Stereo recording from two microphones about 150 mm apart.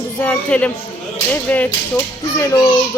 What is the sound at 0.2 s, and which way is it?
Speech, 10° left (ahead or behind).